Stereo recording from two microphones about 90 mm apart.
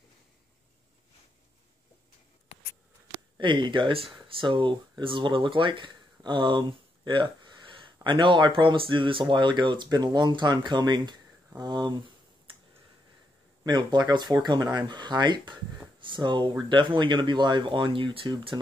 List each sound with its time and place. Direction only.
3.3 s speech: 65° right (ahead or behind)
9.8 s speech: 50° right (ahead or behind)
13.7 s speech: 55° right (ahead or behind)